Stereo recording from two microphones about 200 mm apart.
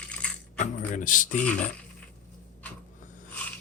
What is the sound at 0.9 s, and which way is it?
Speech, 40° left (ahead or behind).